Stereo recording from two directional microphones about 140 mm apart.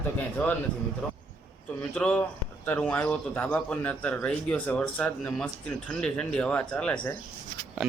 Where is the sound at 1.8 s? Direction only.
10° left (ahead or behind).